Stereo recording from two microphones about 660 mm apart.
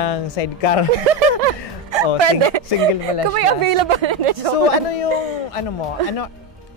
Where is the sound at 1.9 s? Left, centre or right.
Right.